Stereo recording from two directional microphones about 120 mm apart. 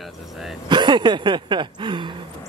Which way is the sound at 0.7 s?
40° right (ahead or behind).